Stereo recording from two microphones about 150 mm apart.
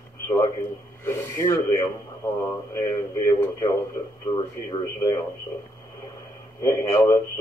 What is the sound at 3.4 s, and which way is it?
Speech, 20° left (ahead or behind).